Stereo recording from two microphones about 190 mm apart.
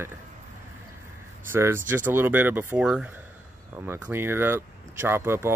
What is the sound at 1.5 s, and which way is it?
Speech, 10° right (ahead or behind).